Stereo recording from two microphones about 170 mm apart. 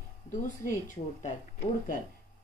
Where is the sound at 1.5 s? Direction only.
60° left (ahead or behind).